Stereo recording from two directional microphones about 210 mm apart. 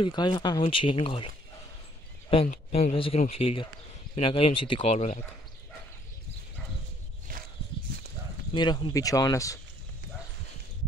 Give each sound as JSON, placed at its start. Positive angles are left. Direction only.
{"t": 0.0, "sound": "speech", "side_deg": 20}
{"t": 8.5, "sound": "speech", "side_deg": 20}